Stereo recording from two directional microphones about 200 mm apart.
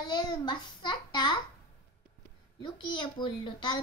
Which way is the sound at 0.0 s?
20° left (ahead or behind).